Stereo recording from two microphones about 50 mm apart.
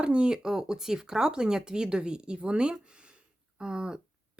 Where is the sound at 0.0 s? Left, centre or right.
Right.